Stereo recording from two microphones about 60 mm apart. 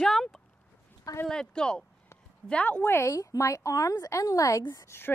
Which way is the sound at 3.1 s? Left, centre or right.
Left.